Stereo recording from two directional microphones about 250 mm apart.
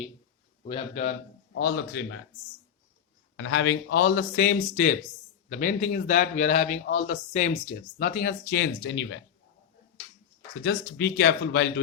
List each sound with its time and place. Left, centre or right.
0.6 s a man's voice: left
1.5 s speech: left
3.3 s a man's voice: left
10.6 s speech: left